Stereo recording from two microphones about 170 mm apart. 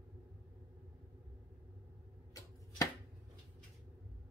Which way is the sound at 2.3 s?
20° left (ahead or behind).